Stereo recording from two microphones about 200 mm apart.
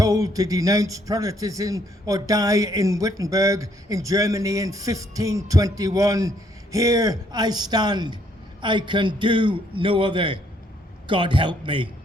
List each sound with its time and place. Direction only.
0.0 s a man's voice: 15° right (ahead or behind)